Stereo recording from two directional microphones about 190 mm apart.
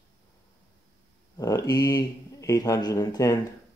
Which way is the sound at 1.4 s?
20° left (ahead or behind).